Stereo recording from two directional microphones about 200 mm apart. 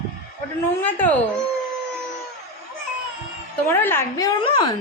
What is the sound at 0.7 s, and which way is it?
Speech, 10° left (ahead or behind).